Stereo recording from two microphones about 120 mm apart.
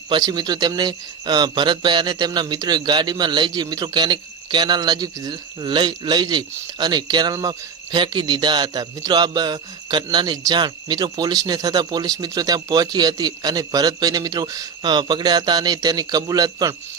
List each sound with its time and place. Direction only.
0.1 s speech: 35° right (ahead or behind)